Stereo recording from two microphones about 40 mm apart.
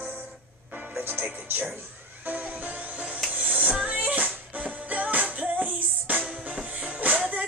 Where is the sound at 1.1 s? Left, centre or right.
Right.